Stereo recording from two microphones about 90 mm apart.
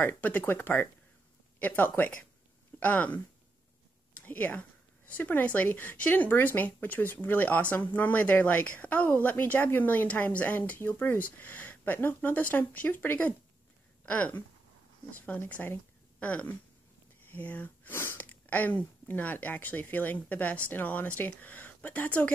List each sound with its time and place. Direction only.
0.0 s a woman's voice: 20° left (ahead or behind)
4.1 s a woman's voice: 20° left (ahead or behind)